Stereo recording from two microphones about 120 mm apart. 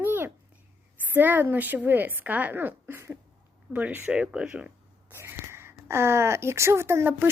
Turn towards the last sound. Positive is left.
turn(degrees=-20)  # may be behind; listen again after turning